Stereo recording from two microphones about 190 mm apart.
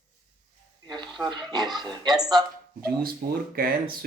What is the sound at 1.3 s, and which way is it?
Speech, 20° right (ahead or behind).